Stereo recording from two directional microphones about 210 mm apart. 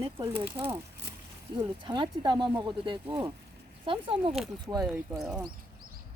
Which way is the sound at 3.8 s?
25° right (ahead or behind).